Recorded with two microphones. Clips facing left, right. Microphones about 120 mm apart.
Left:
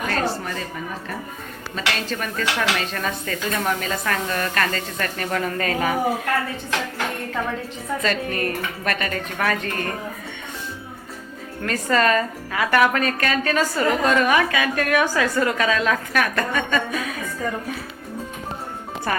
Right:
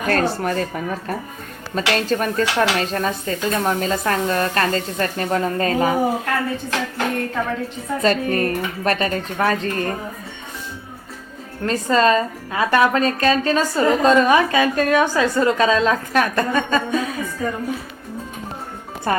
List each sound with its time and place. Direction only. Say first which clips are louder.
0.1 s speech: right 9 dB; 50° right (ahead or behind)
1.7 s dishes: right 7 dB; 40° right (ahead or behind)
8.0 s dishes: right 7 dB; 40° right (ahead or behind)
11.6 s a woman's voice: right 3 dB; 25° right (ahead or behind)
19.1 s a woman's voice: right 4 dB; 30° right (ahead or behind)